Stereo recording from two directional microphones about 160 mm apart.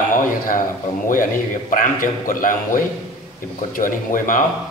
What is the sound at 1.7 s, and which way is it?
A man's voice, 55° left (ahead or behind).